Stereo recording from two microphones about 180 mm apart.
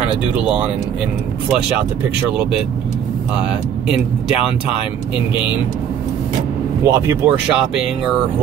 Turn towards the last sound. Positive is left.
turn(degrees=-15)  # may be behind; listen again after turning